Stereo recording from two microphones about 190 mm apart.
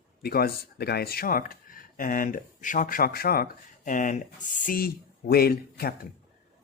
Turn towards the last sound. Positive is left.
turn(degrees=55)  # may be behind; listen again after turning